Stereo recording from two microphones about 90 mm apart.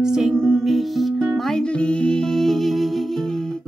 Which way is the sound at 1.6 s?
10° left (ahead or behind).